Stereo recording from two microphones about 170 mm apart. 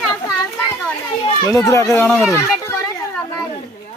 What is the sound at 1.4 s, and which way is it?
Speech, 15° left (ahead or behind).